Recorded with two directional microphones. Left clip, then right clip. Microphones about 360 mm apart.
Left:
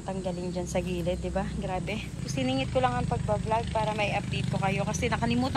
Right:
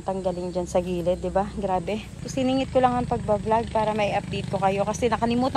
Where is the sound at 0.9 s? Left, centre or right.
Right.